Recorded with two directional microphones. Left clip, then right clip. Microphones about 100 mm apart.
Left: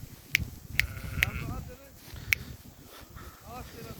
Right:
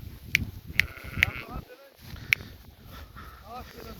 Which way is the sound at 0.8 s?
55° left (ahead or behind).